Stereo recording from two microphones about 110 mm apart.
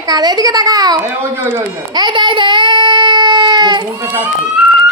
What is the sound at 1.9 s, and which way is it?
Child singing, 40° right (ahead or behind).